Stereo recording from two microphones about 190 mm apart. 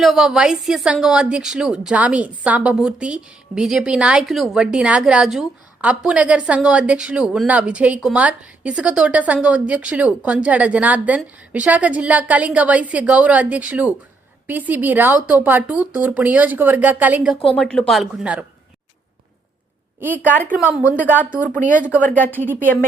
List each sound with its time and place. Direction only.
0.0 s a woman's voice: centre (ahead or behind)
20.0 s speech: 10° right (ahead or behind)
21.6 s speech: 45° right (ahead or behind)
22.2 s a woman's voice: 10° left (ahead or behind)